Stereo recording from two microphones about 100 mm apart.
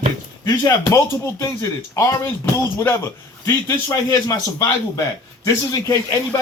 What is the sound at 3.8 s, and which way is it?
Speech, 40° left (ahead or behind).